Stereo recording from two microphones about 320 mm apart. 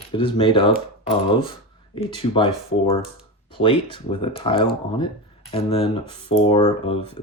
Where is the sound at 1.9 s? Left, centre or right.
Centre.